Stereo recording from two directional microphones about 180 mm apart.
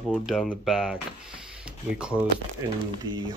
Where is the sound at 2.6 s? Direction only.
15° right (ahead or behind).